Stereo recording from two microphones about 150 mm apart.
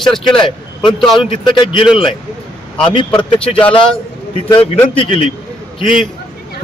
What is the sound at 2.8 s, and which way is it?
A man's voice, 35° left (ahead or behind).